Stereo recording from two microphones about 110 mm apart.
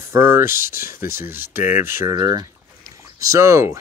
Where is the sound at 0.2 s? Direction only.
20° right (ahead or behind).